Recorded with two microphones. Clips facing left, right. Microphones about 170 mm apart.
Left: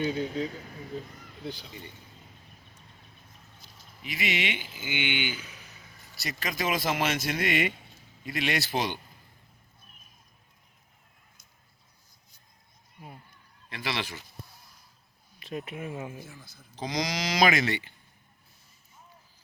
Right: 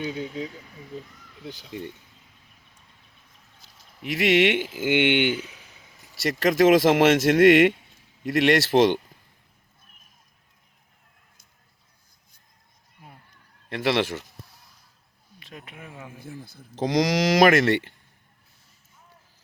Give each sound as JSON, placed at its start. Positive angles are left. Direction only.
{"t": 0.0, "sound": "speech", "side_deg": -10}
{"t": 0.4, "sound": "speech", "side_deg": 50}
{"t": 4.0, "sound": "speech", "side_deg": -70}
{"t": 6.2, "sound": "speech", "side_deg": -85}
{"t": 13.7, "sound": "speech", "side_deg": -65}
{"t": 15.4, "sound": "speech", "side_deg": 25}
{"t": 16.8, "sound": "speech", "side_deg": -75}